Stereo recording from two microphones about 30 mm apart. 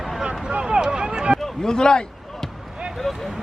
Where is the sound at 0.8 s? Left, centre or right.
Right.